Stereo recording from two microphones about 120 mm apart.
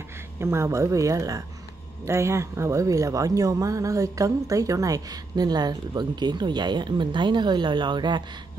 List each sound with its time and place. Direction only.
0.4 s speech: 20° right (ahead or behind); by 8.2 s 40° right (ahead or behind)